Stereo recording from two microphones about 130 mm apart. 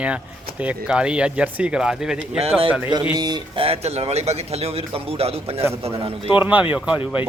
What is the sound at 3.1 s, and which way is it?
Speech, 35° right (ahead or behind).